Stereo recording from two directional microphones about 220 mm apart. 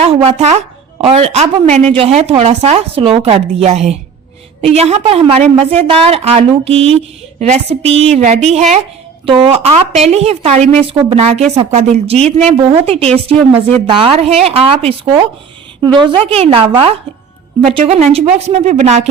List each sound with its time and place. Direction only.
0.0 s a woman's voice: 25° right (ahead or behind)